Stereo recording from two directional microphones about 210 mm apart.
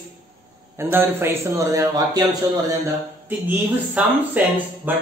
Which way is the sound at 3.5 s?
5° right (ahead or behind).